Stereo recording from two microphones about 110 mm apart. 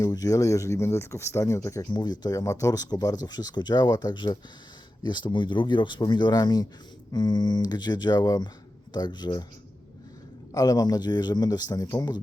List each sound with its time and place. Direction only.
0.0 s speech: 30° left (ahead or behind)
10.5 s speech: 35° left (ahead or behind)